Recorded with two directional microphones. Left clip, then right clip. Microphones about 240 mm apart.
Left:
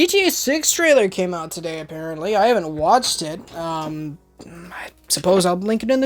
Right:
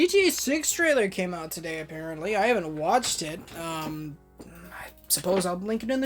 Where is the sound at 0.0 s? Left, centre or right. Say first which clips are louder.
Left 5 dB; left.